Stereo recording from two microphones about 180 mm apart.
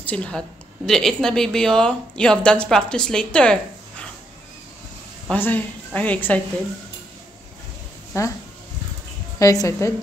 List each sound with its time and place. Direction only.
0.0 s speech: 5° left (ahead or behind)
5.3 s a woman's voice: 10° left (ahead or behind)
8.1 s a woman's voice: 15° left (ahead or behind)
9.4 s a woman's voice: 20° left (ahead or behind)